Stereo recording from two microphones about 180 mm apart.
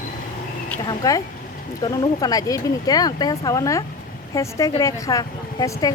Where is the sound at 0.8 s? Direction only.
20° left (ahead or behind).